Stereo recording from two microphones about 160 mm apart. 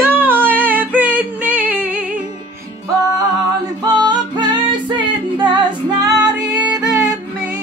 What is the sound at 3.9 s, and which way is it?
Music, 25° right (ahead or behind).